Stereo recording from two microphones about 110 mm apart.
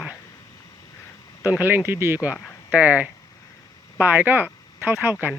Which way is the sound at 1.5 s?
15° right (ahead or behind).